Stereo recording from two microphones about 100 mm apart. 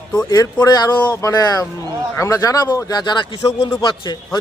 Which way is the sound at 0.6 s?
40° left (ahead or behind).